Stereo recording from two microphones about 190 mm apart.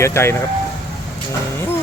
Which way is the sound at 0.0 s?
15° left (ahead or behind).